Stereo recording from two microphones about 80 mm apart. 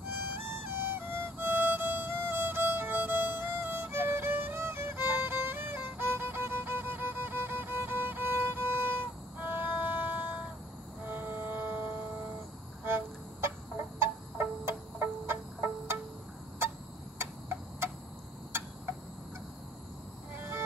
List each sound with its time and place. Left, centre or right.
0.8 s music: right
17.2 s tick-tock: right
20.3 s vehicle: right